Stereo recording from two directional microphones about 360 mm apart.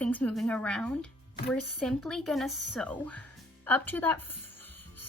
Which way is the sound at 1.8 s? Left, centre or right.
Centre.